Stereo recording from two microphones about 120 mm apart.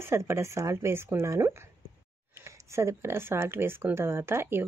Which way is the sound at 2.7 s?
20° right (ahead or behind).